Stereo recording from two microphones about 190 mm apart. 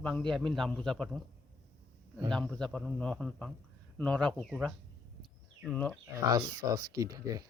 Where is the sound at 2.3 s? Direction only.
5° left (ahead or behind).